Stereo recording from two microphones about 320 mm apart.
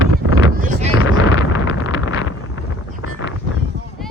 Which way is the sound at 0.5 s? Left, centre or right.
Right.